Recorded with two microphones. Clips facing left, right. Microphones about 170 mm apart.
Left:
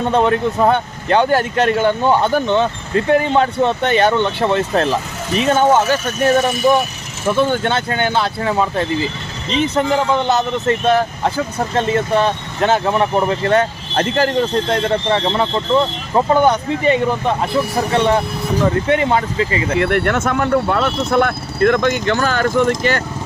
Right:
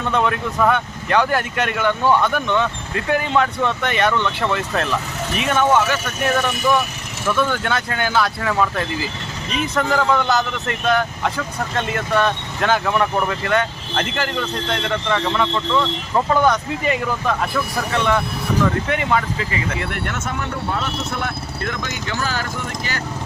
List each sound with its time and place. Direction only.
0.0 s speech: 35° left (ahead or behind)
19.8 s speech: 60° left (ahead or behind)